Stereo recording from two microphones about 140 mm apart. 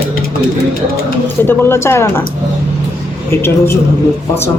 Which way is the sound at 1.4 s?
15° left (ahead or behind).